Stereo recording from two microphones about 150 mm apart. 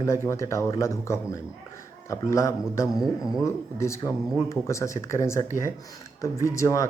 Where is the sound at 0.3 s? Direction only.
20° left (ahead or behind).